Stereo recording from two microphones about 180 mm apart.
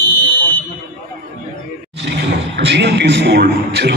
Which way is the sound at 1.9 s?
75° right (ahead or behind).